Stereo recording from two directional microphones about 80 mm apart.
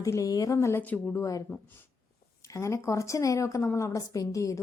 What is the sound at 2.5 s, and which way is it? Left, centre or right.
A woman's voice, left.